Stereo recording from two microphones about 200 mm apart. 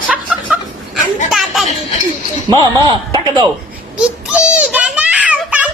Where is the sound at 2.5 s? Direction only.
20° right (ahead or behind).